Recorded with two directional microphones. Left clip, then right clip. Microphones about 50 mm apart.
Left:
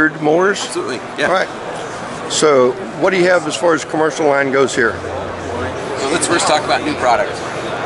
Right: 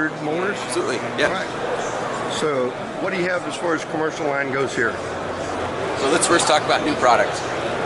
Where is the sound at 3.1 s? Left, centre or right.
Left.